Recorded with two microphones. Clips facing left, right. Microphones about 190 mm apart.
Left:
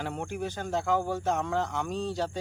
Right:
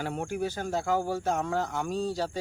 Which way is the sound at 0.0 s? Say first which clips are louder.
Right 2 dB; 5° right (ahead or behind).